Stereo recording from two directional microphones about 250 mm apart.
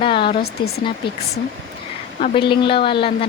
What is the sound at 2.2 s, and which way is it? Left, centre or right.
Speech, centre.